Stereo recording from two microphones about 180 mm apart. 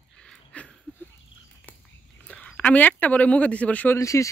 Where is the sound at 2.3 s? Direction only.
5° left (ahead or behind).